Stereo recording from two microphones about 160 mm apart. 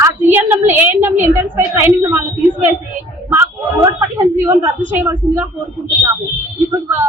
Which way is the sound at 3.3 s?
15° right (ahead or behind).